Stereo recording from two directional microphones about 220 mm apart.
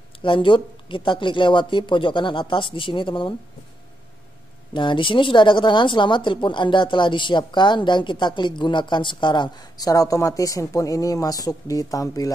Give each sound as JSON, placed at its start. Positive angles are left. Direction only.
{"t": 0.2, "sound": "a woman's voice", "side_deg": 25}
{"t": 4.7, "sound": "a woman's voice", "side_deg": 20}